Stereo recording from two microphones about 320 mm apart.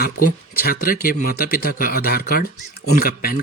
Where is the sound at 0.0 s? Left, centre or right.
Left.